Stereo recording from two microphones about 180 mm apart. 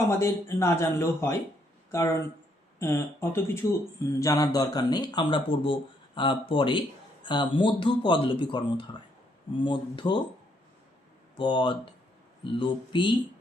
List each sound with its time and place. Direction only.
0.1 s speech: 15° left (ahead or behind)
11.3 s speech: 25° left (ahead or behind)